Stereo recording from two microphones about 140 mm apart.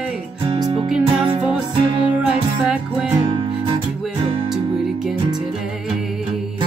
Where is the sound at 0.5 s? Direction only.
35° right (ahead or behind).